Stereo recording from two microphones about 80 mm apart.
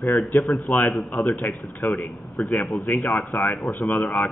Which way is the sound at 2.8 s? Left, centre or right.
Left.